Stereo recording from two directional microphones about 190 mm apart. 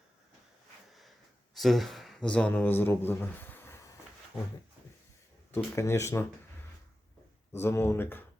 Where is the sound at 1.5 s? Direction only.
Centre (ahead or behind).